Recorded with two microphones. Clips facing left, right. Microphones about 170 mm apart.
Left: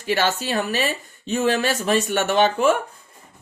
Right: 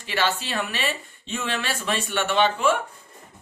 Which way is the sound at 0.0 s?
45° left (ahead or behind).